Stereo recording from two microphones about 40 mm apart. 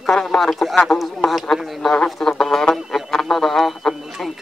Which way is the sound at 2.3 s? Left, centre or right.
Centre.